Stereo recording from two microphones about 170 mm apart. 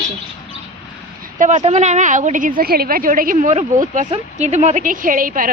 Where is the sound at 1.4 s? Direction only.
45° right (ahead or behind).